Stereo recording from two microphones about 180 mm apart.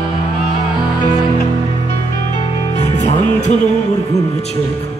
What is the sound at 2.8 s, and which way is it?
Music, 40° left (ahead or behind).